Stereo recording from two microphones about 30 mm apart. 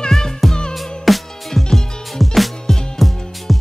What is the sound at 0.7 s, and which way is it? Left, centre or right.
Music, centre.